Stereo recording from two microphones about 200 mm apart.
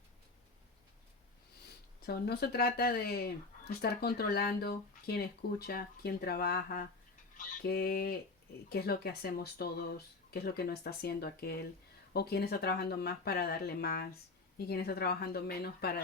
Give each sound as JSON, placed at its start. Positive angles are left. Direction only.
{"t": 2.0, "sound": "speech", "side_deg": 50}
{"t": 7.3, "sound": "fowl", "side_deg": 50}
{"t": 8.7, "sound": "speech", "side_deg": 50}